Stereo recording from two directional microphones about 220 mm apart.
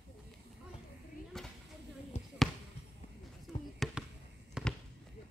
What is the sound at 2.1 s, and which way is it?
Basketball bounce, 30° left (ahead or behind).